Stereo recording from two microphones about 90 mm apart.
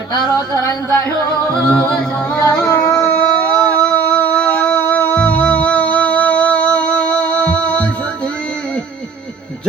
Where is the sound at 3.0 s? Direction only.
10° left (ahead or behind).